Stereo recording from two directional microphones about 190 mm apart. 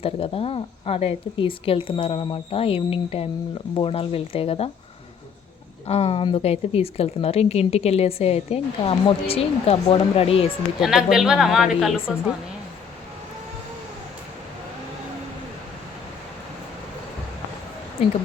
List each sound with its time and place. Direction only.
0.0 s speech: 30° left (ahead or behind)
5.9 s speech: 30° left (ahead or behind)
10.8 s a woman's voice: centre (ahead or behind)